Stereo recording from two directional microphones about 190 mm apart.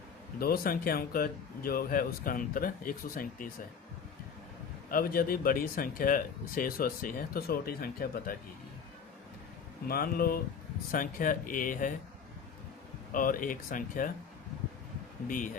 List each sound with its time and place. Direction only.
0.3 s speech: 50° left (ahead or behind)
4.9 s speech: 50° left (ahead or behind)
9.8 s speech: 55° left (ahead or behind)
13.1 s speech: 45° left (ahead or behind)
15.3 s speech: 45° left (ahead or behind)